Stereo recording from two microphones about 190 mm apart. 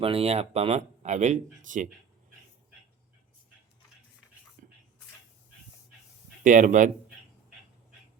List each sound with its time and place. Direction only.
0.0 s speech: 30° right (ahead or behind)
4.6 s a sound: 45° right (ahead or behind)
6.4 s speech: 40° right (ahead or behind)